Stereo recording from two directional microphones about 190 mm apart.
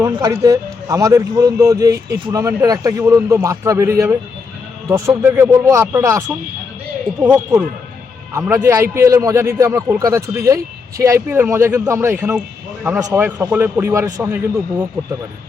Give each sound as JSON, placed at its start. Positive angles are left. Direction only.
{"t": 0.0, "sound": "a man's voice", "side_deg": -15}